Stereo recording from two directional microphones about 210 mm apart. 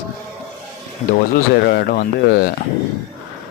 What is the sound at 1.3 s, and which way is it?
Speech, 45° left (ahead or behind).